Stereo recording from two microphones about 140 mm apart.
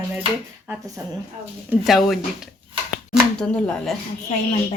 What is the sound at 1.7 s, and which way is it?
Speech, centre (ahead or behind).